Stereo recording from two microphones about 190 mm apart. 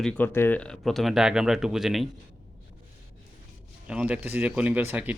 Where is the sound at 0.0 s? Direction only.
5° left (ahead or behind).